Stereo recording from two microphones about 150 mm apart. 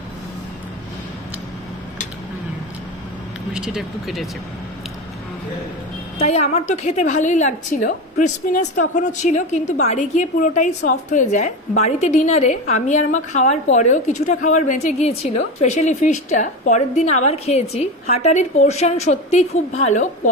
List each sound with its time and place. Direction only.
3.5 s speech: 5° right (ahead or behind)
6.1 s a woman's voice: 45° left (ahead or behind)